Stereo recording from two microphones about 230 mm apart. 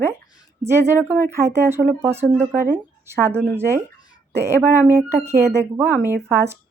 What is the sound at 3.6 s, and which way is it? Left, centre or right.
Speech, centre.